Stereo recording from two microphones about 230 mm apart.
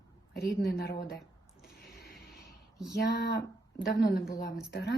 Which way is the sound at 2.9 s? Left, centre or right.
Left.